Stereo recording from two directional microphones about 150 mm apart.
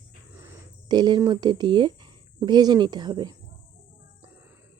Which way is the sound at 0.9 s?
30° right (ahead or behind).